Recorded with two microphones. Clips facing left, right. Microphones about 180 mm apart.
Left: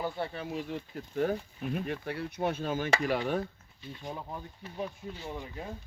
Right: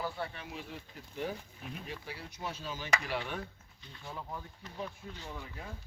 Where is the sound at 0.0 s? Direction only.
30° left (ahead or behind).